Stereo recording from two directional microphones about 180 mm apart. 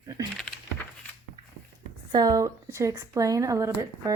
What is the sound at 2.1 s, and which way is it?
Speech, 20° right (ahead or behind).